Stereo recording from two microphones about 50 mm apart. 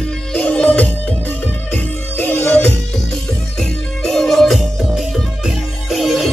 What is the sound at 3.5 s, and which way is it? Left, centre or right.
Music, centre.